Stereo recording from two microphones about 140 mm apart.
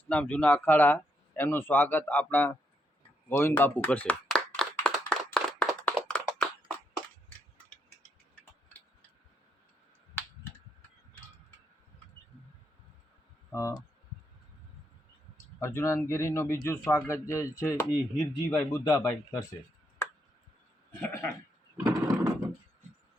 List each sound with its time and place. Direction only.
0.1 s speech: 10° left (ahead or behind)
3.6 s clapping: 10° left (ahead or behind)
13.5 s speech: 20° left (ahead or behind)
15.6 s speech: 20° left (ahead or behind)
18.2 s speech: 10° left (ahead or behind)
18.9 s speech: 25° left (ahead or behind)
21.0 s sheep: 20° left (ahead or behind)
21.8 s a sound: 25° right (ahead or behind)